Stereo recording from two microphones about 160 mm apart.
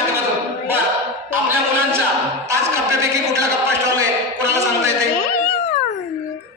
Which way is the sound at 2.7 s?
20° right (ahead or behind).